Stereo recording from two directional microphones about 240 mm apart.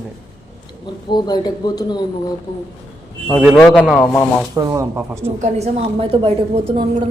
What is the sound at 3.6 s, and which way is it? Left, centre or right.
Speech, centre.